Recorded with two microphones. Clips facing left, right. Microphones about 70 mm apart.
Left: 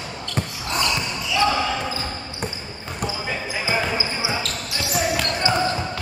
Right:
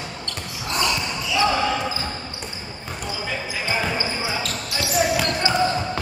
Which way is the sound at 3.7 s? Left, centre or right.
Centre.